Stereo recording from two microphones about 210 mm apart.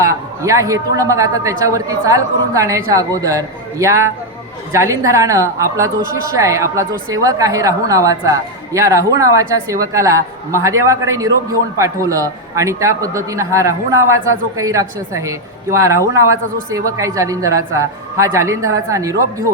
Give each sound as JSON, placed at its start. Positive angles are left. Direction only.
{"t": 0.0, "sound": "a woman's voice", "side_deg": -15}